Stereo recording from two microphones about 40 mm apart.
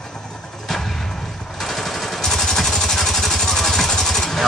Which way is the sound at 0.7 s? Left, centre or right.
Centre.